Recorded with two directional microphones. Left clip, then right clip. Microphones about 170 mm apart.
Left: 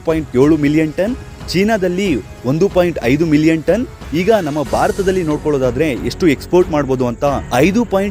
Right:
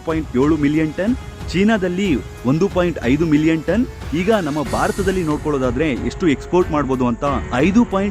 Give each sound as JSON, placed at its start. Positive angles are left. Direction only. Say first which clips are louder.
{"t": 0.0, "sound": "speech", "louder": "left 5 dB", "side_deg": 20}